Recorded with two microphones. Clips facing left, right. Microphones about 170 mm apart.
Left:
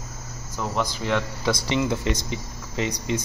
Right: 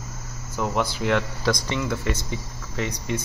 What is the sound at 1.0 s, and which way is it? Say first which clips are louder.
Speech: right 2 dB; centre (ahead or behind).